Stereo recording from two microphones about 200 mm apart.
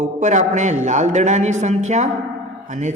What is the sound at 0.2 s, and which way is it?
Speech, 35° right (ahead or behind).